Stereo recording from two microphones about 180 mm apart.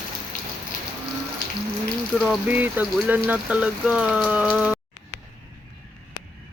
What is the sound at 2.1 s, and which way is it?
Speech, 5° right (ahead or behind).